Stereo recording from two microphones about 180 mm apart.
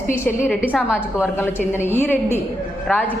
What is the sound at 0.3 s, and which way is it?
Speech, 5° left (ahead or behind).